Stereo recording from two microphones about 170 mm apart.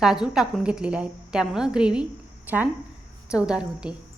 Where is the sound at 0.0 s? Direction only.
5° right (ahead or behind).